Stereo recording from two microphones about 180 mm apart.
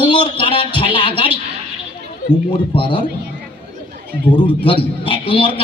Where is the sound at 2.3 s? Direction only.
25° left (ahead or behind).